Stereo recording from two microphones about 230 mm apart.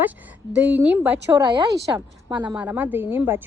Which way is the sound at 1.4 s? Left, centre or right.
Centre.